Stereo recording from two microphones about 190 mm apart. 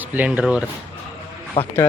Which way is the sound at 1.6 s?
30° left (ahead or behind).